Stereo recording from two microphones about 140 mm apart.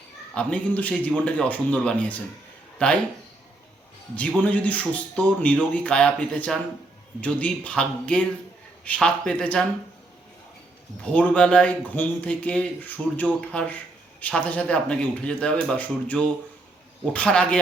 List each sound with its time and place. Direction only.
0.3 s a man's voice: 10° left (ahead or behind)
4.1 s a man's voice: 10° left (ahead or behind)
11.0 s a man's voice: 10° left (ahead or behind)